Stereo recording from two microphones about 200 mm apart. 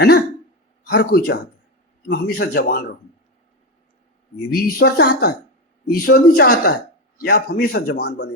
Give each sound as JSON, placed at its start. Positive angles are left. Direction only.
{"t": 0.9, "sound": "a man's voice", "side_deg": 50}
{"t": 4.5, "sound": "a man's voice", "side_deg": 55}